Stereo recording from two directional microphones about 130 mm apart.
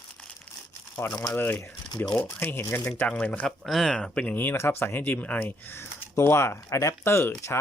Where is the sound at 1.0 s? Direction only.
15° left (ahead or behind).